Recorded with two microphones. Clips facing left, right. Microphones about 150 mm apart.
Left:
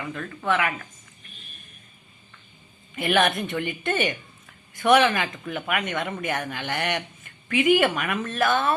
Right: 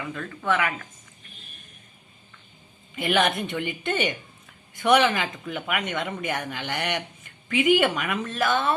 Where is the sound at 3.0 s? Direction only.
20° right (ahead or behind).